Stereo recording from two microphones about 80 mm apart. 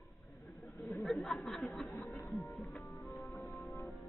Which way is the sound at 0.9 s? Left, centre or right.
Centre.